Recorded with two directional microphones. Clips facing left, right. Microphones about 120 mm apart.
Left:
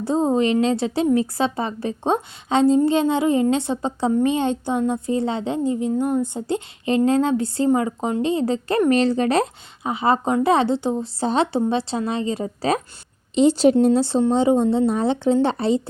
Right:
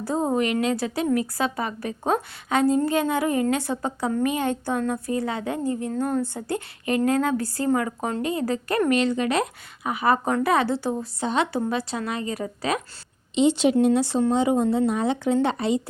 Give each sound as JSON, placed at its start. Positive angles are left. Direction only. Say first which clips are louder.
{"t": 0.0, "sound": "a woman's voice", "louder": "left 4 dB", "side_deg": 25}
{"t": 11.2, "sound": "a woman's voice", "louder": "left 4 dB", "side_deg": 30}